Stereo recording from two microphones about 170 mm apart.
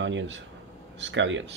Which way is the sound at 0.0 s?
90° right.